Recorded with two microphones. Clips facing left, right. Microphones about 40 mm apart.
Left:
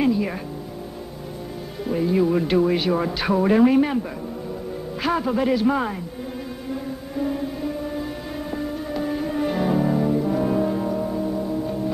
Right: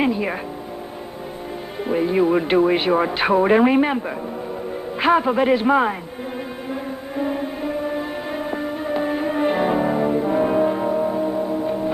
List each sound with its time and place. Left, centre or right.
0.0 s music: right
1.9 s speech: right
5.0 s speech: right
6.7 s music: right